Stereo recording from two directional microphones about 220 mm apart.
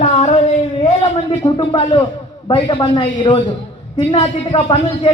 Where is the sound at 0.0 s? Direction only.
30° left (ahead or behind).